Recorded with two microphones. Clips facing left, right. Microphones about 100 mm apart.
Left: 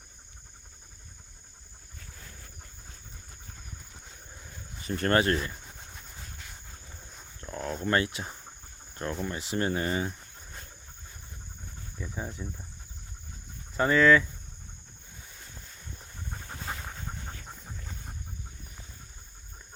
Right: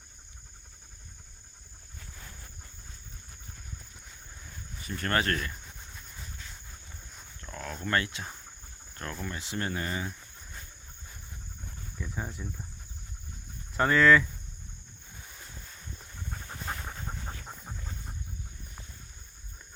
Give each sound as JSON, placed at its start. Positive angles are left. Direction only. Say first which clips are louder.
{"t": 4.9, "sound": "speech", "louder": "left 4 dB", "side_deg": 30}
{"t": 7.5, "sound": "speech", "louder": "left 3 dB", "side_deg": 25}
{"t": 11.9, "sound": "speech", "louder": "even", "side_deg": 10}
{"t": 13.7, "sound": "speech", "louder": "even", "side_deg": 0}